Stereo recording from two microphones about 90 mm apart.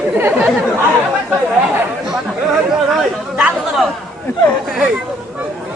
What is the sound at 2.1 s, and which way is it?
Speech, 5° right (ahead or behind).